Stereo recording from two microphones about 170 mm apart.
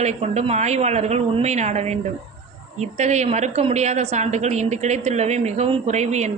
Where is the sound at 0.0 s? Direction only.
40° right (ahead or behind).